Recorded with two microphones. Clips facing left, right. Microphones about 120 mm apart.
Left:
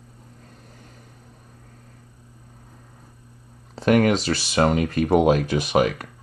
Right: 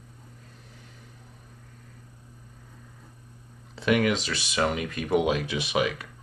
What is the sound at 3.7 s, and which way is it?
Speech, 40° left (ahead or behind).